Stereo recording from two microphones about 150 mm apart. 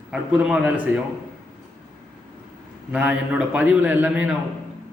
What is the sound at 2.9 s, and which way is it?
A man's voice, 10° right (ahead or behind).